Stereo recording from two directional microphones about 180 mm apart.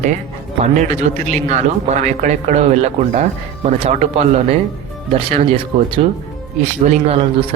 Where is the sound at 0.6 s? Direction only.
40° right (ahead or behind).